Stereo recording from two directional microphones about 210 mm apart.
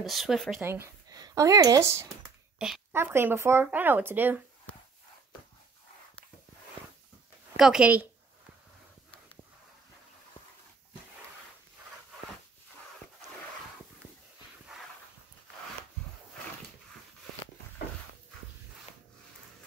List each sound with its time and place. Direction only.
0.0 s speech: centre (ahead or behind)
0.7 s speech: 15° right (ahead or behind)
7.5 s speech: 5° right (ahead or behind)